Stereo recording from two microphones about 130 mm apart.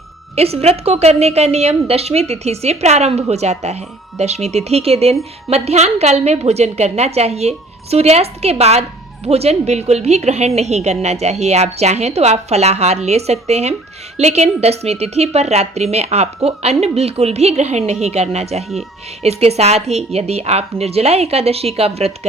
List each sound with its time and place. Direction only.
0.3 s a woman's voice: 50° right (ahead or behind)